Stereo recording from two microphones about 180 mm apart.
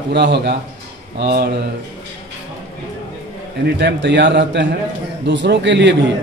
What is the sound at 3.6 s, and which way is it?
A man's voice, 75° right (ahead or behind).